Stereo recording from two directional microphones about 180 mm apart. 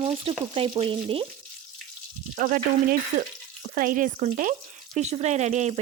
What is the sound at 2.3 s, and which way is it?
Frying, 50° right (ahead or behind).